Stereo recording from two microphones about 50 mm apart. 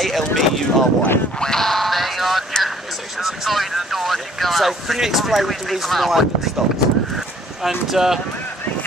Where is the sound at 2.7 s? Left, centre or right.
Centre.